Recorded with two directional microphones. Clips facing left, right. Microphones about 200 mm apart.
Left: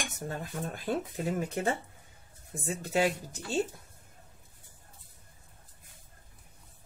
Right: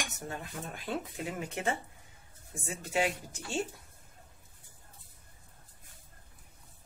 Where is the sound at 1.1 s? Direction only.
35° left (ahead or behind).